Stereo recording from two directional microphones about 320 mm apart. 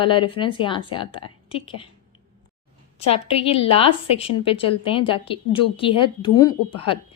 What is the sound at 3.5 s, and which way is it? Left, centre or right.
A woman's voice, centre.